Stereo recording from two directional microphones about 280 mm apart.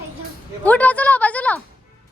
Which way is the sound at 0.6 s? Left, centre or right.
Centre.